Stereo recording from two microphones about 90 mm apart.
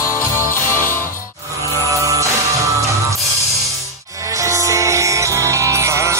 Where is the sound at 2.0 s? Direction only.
35° right (ahead or behind).